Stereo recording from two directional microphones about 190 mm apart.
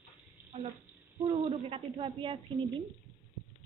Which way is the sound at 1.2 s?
30° right (ahead or behind).